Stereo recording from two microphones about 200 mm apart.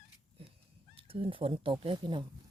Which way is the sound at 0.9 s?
25° right (ahead or behind).